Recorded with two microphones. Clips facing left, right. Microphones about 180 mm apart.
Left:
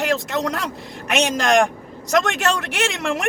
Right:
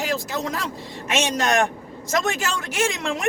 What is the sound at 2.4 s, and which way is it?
Speech, 70° left (ahead or behind).